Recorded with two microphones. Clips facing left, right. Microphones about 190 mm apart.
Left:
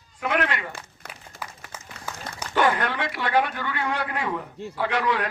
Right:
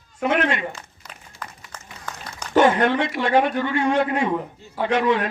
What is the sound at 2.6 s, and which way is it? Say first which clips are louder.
A man's voice: right 6 dB; 25° right (ahead or behind).